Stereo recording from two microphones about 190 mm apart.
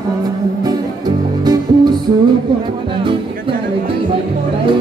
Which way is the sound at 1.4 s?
20° right (ahead or behind).